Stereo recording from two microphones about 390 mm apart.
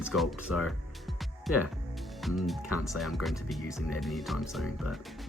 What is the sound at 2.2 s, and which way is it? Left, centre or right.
Speech, centre.